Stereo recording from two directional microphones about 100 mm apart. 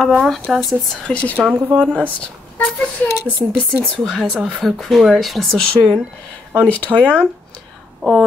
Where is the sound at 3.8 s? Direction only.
10° left (ahead or behind).